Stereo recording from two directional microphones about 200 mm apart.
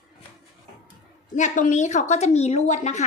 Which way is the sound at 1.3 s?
35° left (ahead or behind).